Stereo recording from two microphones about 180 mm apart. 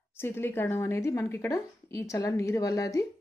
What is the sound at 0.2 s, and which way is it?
A woman's voice, 15° left (ahead or behind).